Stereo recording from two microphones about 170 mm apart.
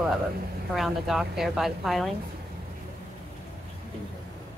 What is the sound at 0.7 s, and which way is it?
Speech, centre (ahead or behind).